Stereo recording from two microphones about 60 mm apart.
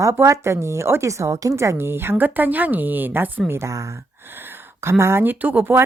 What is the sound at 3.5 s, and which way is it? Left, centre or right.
Speech, right.